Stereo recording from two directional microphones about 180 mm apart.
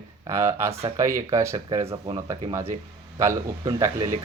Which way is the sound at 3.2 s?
20° right (ahead or behind).